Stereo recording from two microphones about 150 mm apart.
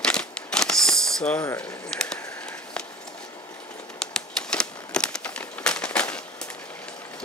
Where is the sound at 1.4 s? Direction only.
15° left (ahead or behind).